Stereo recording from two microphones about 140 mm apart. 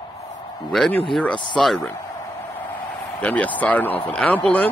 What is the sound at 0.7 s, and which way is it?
Speech, centre (ahead or behind).